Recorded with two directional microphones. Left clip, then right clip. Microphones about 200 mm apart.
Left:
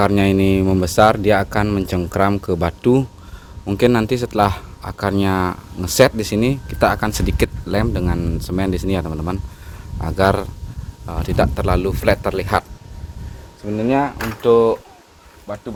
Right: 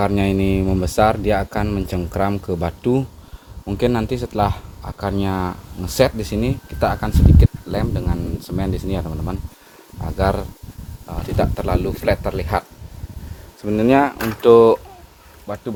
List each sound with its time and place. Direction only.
0.0 s a man's voice: 25° left (ahead or behind)
13.7 s speech: 40° right (ahead or behind)